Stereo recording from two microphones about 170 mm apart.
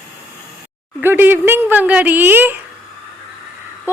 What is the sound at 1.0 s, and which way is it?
A woman's voice, 10° right (ahead or behind).